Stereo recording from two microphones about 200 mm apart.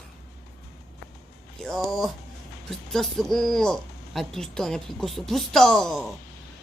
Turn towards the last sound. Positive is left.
turn(degrees=0)  # may be behind; listen again after turning